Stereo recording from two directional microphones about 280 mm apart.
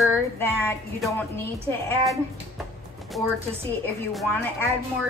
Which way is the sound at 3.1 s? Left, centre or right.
Centre.